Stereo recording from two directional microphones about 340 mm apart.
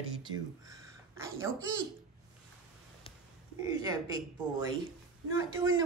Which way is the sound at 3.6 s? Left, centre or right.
Centre.